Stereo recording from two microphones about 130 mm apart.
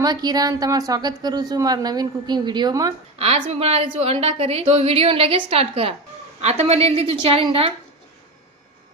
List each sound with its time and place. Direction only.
0.0 s a woman's voice: 30° right (ahead or behind)
3.2 s a woman's voice: 45° right (ahead or behind)